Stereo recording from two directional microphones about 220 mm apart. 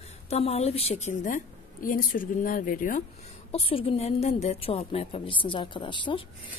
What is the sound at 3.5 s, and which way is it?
A woman's voice, 25° left (ahead or behind).